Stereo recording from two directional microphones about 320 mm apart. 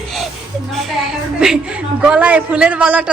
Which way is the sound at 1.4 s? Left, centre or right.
Centre.